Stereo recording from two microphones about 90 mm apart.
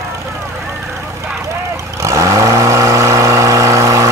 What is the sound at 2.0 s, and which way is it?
Vehicle, 35° right (ahead or behind).